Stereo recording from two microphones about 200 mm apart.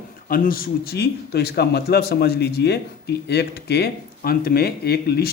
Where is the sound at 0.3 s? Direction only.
45° left (ahead or behind).